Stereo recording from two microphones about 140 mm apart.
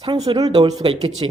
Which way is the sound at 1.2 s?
40° right (ahead or behind).